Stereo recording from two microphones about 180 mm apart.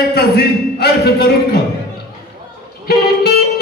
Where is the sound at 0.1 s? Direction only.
65° left (ahead or behind).